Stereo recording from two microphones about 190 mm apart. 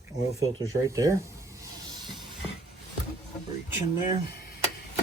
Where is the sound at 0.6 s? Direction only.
20° right (ahead or behind).